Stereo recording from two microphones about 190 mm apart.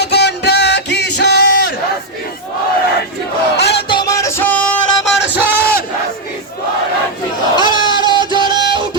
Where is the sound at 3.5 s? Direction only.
60° left (ahead or behind).